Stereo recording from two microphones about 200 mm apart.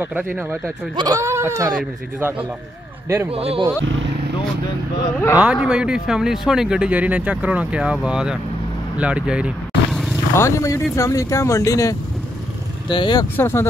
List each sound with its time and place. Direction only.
0.0 s speech: 10° right (ahead or behind)
3.3 s speech: 30° right (ahead or behind)
3.8 s speech: 65° right (ahead or behind)
5.4 s speech: 5° right (ahead or behind)
8.9 s vehicle: 5° right (ahead or behind)
10.3 s speech: 15° left (ahead or behind)
12.9 s speech: 20° left (ahead or behind)